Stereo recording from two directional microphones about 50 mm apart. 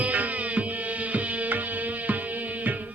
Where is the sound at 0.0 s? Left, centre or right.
Right.